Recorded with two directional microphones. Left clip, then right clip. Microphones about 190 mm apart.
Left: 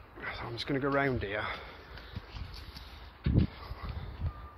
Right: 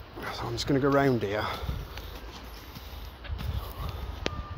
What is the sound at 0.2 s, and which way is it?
Speech, 10° right (ahead or behind).